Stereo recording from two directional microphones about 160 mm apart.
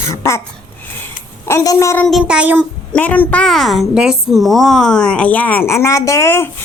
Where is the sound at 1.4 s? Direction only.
20° left (ahead or behind).